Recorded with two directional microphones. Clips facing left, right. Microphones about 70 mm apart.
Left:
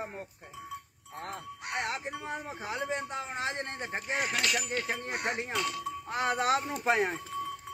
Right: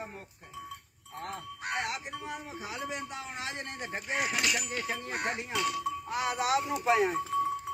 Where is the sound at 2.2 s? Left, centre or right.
Left.